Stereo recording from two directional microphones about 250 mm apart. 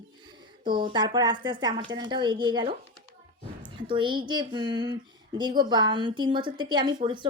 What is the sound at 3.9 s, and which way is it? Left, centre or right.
Speech, centre.